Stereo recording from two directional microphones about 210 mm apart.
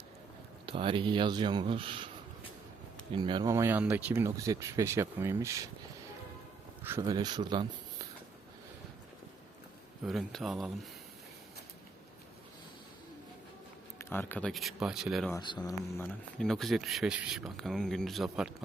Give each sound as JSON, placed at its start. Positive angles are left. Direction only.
{"t": 0.6, "sound": "speech", "side_deg": -25}
{"t": 3.1, "sound": "speech", "side_deg": -20}
{"t": 6.8, "sound": "speech", "side_deg": -15}
{"t": 10.0, "sound": "speech", "side_deg": 0}
{"t": 14.0, "sound": "speech", "side_deg": 10}
{"t": 15.3, "sound": "speech", "side_deg": 20}